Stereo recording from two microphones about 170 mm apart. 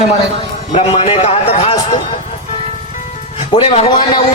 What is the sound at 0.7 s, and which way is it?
A man's voice, 35° left (ahead or behind).